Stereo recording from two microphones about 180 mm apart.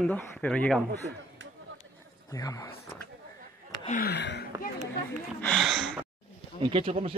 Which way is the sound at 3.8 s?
50° left (ahead or behind).